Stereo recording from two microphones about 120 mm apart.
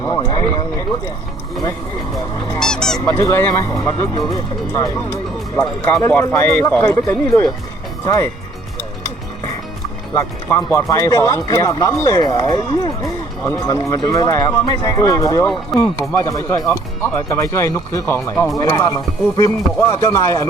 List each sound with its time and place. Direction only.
0.0 s speech: 30° left (ahead or behind)
2.1 s speech: 30° left (ahead or behind)
2.6 s goose: 5° left (ahead or behind)
3.1 s speech: 20° left (ahead or behind)
6.0 s speech: 20° left (ahead or behind)
10.6 s speech: 25° left (ahead or behind)